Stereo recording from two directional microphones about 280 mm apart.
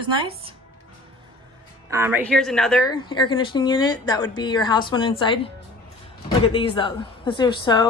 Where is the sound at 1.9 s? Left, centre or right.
Centre.